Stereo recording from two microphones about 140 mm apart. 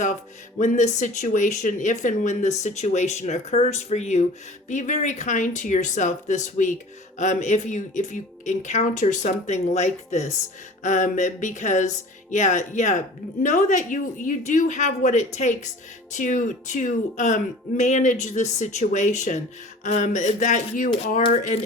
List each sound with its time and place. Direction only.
0.6 s speech: 60° left (ahead or behind)